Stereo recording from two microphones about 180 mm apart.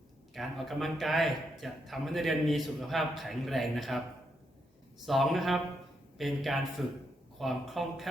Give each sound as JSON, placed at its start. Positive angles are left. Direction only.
{"t": 0.3, "sound": "a man's voice", "side_deg": 0}
{"t": 5.0, "sound": "a man's voice", "side_deg": 0}